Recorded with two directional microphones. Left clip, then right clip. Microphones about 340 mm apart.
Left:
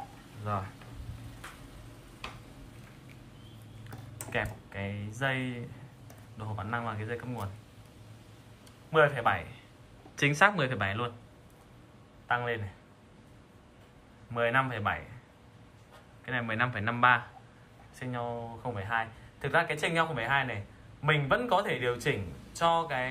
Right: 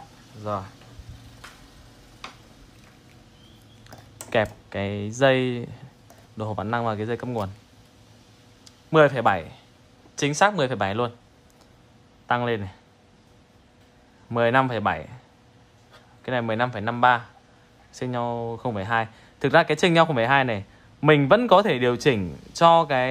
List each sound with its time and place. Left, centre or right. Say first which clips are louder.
0.4 s speech: right 6 dB; centre
4.3 s speech: right 11 dB; centre
8.6 s a man's voice: right 7 dB; centre
12.3 s speech: right 7 dB; centre
14.3 s speech: right 8 dB; centre
16.3 s speech: right 7 dB; centre